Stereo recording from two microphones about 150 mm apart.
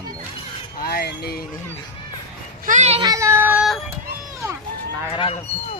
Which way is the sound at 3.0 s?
20° right (ahead or behind).